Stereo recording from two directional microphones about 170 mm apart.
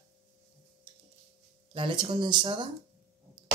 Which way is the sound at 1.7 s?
30° right (ahead or behind).